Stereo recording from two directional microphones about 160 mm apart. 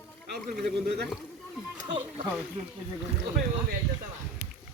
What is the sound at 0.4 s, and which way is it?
Speech, 70° right (ahead or behind).